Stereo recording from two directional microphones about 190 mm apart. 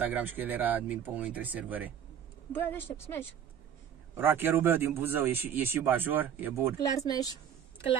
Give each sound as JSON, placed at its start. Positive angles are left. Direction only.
{"t": 0.0, "sound": "speech", "side_deg": -10}
{"t": 2.5, "sound": "a woman's voice", "side_deg": 10}
{"t": 4.1, "sound": "speech", "side_deg": -10}
{"t": 6.8, "sound": "speech", "side_deg": 20}